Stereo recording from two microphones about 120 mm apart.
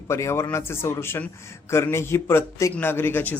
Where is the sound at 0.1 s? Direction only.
20° left (ahead or behind).